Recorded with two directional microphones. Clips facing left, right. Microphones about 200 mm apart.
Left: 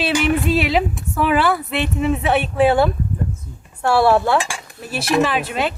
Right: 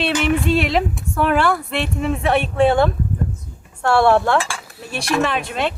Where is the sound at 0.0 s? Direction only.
5° left (ahead or behind).